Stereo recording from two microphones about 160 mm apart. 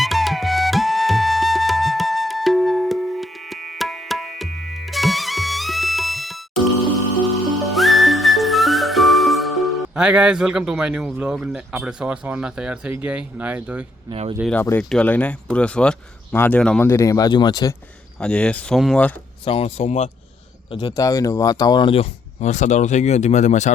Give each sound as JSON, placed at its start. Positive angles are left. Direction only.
{"t": 0.0, "sound": "flute", "side_deg": 0}
{"t": 7.6, "sound": "music", "side_deg": 0}
{"t": 14.1, "sound": "speech", "side_deg": -35}
{"t": 14.5, "sound": "speech", "side_deg": 10}
{"t": 18.2, "sound": "speech", "side_deg": 5}
{"t": 19.5, "sound": "speech", "side_deg": 40}
{"t": 20.7, "sound": "speech", "side_deg": 30}